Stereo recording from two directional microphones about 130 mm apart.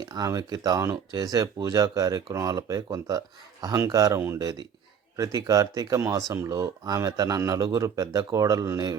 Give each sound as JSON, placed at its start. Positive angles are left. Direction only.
{"t": 0.0, "sound": "speech", "side_deg": -30}